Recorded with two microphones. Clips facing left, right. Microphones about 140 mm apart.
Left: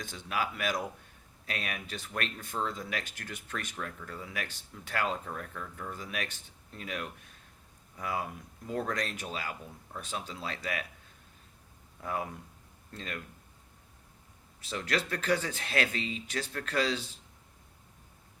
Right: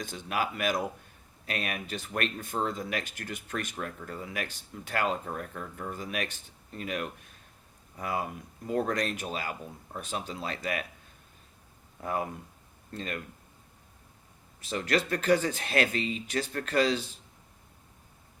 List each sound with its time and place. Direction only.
0.0 s speech: 50° right (ahead or behind)
3.8 s speech: 30° right (ahead or behind)
4.1 s speech: 50° right (ahead or behind)
5.3 s speech: 25° right (ahead or behind)
6.1 s speech: 50° right (ahead or behind)
8.2 s speech: 10° right (ahead or behind)
8.9 s speech: 50° right (ahead or behind)
9.6 s speech: 15° right (ahead or behind)
10.0 s speech: 50° right (ahead or behind)
12.0 s speech: 50° right (ahead or behind)
14.7 s speech: 50° right (ahead or behind)